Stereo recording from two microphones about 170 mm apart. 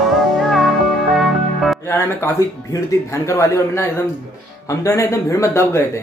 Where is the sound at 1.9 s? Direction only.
15° left (ahead or behind).